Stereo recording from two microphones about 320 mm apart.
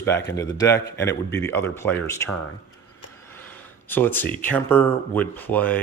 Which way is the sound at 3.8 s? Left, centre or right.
Centre.